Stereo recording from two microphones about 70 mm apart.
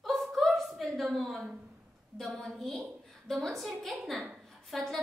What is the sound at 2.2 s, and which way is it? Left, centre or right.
A woman's voice, centre.